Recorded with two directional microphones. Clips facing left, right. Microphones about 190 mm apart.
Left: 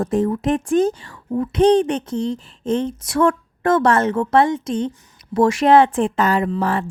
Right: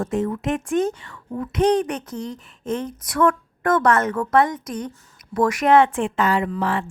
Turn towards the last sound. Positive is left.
turn(degrees=40)  # may be behind; listen again after turning